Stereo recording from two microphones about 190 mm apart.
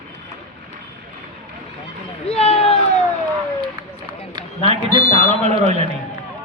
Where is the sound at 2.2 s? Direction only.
35° left (ahead or behind).